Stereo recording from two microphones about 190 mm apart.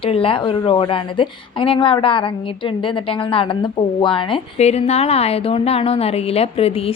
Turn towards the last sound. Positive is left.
turn(degrees=30)  # may be behind; listen again after turning